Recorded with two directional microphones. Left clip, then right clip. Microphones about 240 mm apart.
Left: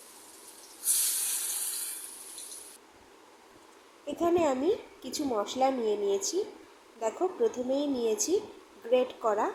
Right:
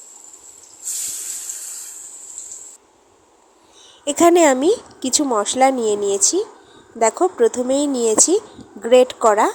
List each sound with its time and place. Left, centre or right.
4.0 s speech: right